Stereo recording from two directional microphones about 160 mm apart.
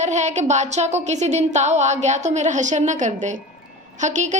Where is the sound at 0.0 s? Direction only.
50° right (ahead or behind).